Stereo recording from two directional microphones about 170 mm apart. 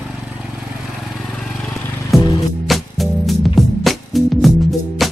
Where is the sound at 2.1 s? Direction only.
25° left (ahead or behind).